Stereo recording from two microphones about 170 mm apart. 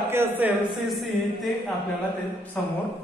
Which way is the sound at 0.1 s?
15° right (ahead or behind).